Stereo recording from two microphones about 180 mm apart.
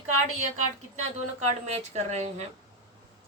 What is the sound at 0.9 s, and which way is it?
A woman's voice, 40° right (ahead or behind).